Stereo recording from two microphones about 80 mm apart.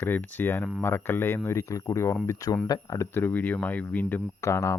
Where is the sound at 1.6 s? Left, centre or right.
Left.